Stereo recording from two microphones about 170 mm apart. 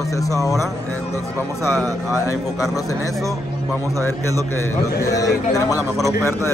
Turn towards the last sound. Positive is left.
turn(degrees=20)  # may be behind; listen again after turning